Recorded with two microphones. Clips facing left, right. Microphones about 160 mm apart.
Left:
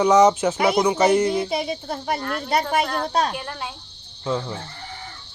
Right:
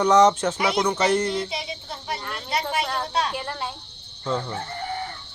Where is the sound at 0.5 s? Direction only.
50° left (ahead or behind).